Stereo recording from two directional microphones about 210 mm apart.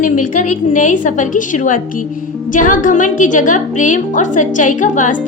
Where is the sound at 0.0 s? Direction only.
40° left (ahead or behind).